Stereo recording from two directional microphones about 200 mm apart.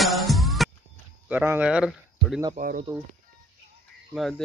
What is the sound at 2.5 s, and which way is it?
Speech, 40° right (ahead or behind).